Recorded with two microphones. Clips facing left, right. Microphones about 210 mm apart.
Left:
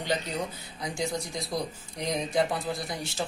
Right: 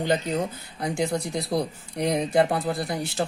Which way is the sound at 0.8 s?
60° right (ahead or behind).